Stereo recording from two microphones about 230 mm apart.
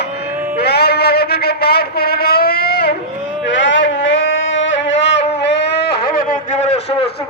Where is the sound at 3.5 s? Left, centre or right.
Left.